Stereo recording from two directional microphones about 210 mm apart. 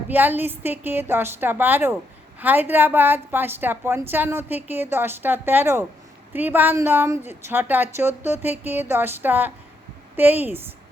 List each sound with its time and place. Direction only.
0.1 s a woman's voice: 10° right (ahead or behind)